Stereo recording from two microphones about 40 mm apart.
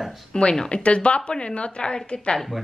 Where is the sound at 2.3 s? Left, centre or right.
Centre.